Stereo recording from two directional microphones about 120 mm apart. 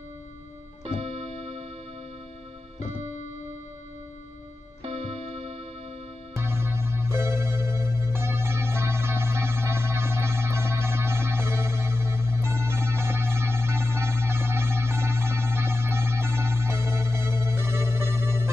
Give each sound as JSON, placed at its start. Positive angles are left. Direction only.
{"t": 1.4, "sound": "music", "side_deg": -60}
{"t": 4.8, "sound": "music", "side_deg": -60}
{"t": 6.3, "sound": "music", "side_deg": -20}